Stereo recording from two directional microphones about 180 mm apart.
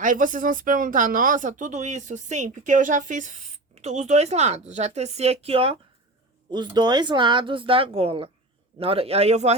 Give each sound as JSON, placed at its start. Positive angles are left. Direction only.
{"t": 0.0, "sound": "a woman's voice", "side_deg": -45}